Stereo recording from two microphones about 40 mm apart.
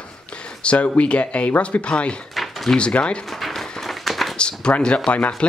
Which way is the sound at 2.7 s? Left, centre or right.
Left.